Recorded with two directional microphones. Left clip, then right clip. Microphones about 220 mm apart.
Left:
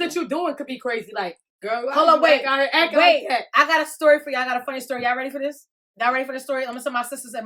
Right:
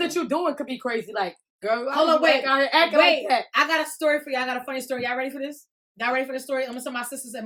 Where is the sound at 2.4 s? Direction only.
10° right (ahead or behind).